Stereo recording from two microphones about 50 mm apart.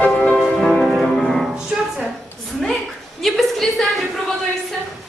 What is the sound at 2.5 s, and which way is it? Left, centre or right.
Speech, centre.